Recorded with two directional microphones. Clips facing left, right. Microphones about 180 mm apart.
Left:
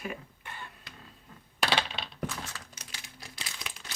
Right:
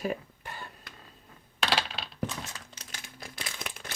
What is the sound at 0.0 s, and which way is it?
Cough, 35° right (ahead or behind).